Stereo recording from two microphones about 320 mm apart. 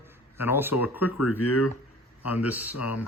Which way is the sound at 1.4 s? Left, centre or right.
Left.